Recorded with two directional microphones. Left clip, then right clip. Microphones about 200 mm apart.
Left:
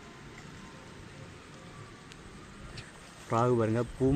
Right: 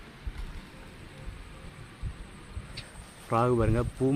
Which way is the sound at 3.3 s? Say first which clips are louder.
Right 2 dB; 5° right (ahead or behind).